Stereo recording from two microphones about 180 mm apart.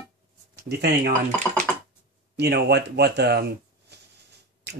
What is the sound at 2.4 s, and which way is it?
Speech, 65° right (ahead or behind).